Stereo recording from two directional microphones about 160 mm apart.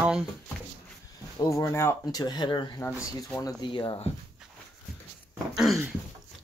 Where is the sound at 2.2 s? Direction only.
30° left (ahead or behind).